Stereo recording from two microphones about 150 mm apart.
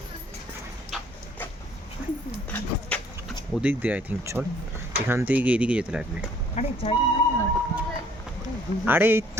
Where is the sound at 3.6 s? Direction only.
10° right (ahead or behind).